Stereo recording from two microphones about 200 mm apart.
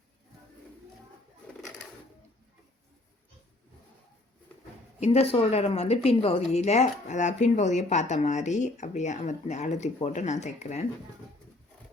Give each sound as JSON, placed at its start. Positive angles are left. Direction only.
{"t": 4.9, "sound": "a woman's voice", "side_deg": 30}